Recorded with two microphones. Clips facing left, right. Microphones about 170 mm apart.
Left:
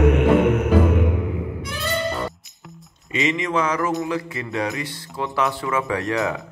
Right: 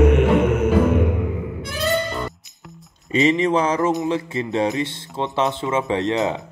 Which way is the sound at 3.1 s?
35° right (ahead or behind).